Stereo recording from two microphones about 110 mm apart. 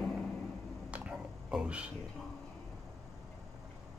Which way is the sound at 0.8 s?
10° right (ahead or behind).